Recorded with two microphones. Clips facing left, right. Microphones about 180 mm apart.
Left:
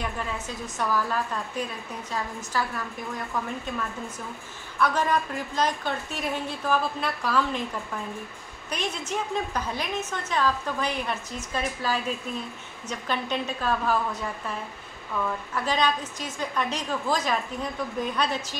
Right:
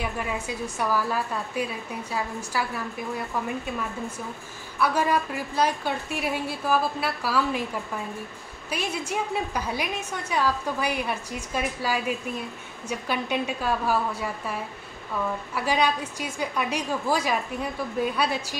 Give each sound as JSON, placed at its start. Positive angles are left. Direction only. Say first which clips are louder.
{"t": 0.0, "sound": "a woman's voice", "louder": "right 2 dB", "side_deg": -10}
{"t": 4.7, "sound": "a woman's voice", "louder": "right 1 dB", "side_deg": -10}
{"t": 8.6, "sound": "a woman's voice", "louder": "right 1 dB", "side_deg": -10}